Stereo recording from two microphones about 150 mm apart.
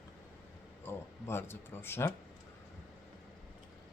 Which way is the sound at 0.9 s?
15° left (ahead or behind).